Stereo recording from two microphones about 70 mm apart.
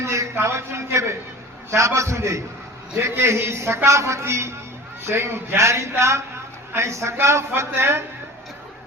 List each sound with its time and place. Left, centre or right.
0.0 s a man's voice: right